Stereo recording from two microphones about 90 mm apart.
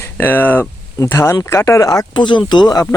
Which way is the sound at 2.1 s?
60° left (ahead or behind).